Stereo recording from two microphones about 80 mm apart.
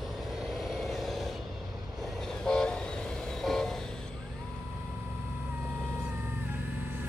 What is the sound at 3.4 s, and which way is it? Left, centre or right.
Vehicle, centre.